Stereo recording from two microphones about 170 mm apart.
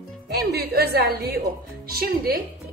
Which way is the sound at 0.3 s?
70° right (ahead or behind).